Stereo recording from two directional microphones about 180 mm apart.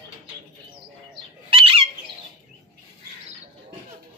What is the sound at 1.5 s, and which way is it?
Bird, 30° right (ahead or behind).